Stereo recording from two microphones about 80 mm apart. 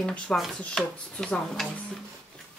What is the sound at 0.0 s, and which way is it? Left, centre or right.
Speech, centre.